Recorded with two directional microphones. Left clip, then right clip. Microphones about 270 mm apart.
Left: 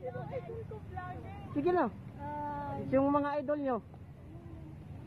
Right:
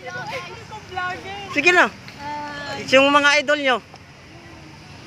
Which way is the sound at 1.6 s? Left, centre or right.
Centre.